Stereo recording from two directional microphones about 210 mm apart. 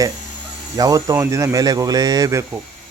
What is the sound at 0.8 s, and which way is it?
Speech, 15° right (ahead or behind).